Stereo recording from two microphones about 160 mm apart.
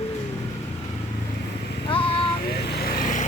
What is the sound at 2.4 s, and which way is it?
Vehicle, 85° left.